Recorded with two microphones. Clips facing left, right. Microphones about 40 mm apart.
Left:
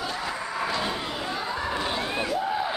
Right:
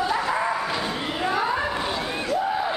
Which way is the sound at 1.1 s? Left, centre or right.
Right.